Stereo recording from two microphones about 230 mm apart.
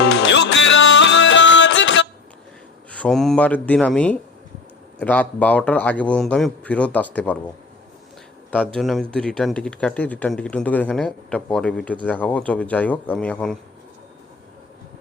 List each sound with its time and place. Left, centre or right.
0.0 s music: left
2.9 s a man's voice: centre
8.6 s speech: centre